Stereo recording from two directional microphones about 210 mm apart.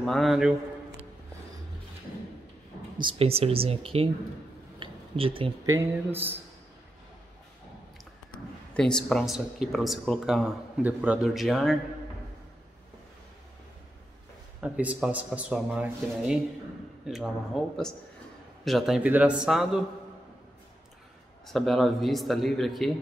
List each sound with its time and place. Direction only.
0.0 s speech: centre (ahead or behind)
3.0 s speech: 25° right (ahead or behind)
4.7 s a sound: 25° right (ahead or behind)
8.7 s speech: 5° left (ahead or behind)
14.6 s speech: 5° right (ahead or behind)
21.5 s speech: centre (ahead or behind)